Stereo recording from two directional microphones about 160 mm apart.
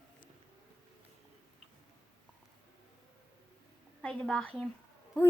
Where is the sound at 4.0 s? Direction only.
5° left (ahead or behind).